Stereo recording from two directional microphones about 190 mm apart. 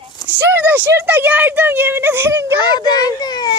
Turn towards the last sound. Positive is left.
turn(degrees=20)  # may be behind; listen again after turning